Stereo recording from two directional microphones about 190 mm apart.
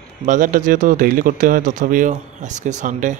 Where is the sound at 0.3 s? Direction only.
45° right (ahead or behind).